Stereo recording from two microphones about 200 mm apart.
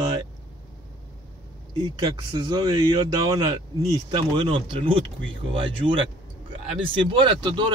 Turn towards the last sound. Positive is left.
turn(degrees=-25)  # may be behind; listen again after turning